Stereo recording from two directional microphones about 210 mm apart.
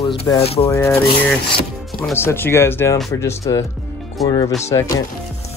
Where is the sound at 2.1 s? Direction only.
10° left (ahead or behind).